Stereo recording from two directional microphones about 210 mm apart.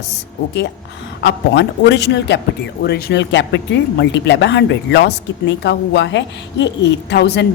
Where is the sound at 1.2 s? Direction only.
55° left (ahead or behind).